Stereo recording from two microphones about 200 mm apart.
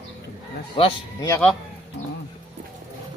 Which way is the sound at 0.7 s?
25° left (ahead or behind).